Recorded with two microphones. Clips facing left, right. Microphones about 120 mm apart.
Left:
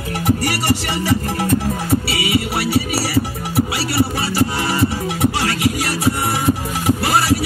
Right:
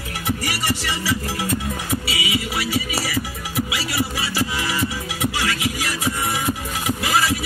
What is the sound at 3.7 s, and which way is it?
Music, 50° left (ahead or behind).